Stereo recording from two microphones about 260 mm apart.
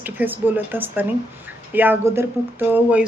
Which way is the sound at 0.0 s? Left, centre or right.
Centre.